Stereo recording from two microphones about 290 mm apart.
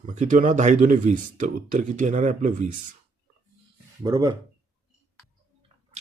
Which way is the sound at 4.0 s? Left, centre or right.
Centre.